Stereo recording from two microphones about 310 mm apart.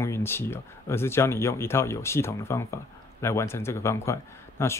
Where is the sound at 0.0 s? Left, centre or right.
Centre.